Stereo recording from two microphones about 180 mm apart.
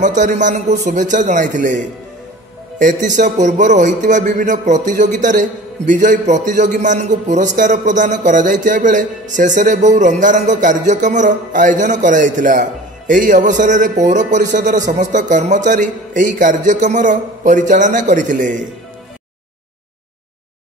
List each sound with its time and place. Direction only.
0.0 s a man's voice: 45° right (ahead or behind)